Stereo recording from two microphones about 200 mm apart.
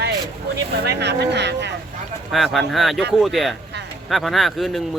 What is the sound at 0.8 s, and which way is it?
Speech, 55° right (ahead or behind).